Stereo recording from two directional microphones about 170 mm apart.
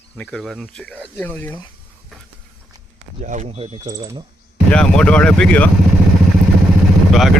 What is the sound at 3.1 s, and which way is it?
Speech, 45° right (ahead or behind).